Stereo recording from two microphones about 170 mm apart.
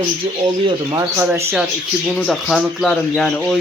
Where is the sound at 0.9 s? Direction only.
20° right (ahead or behind).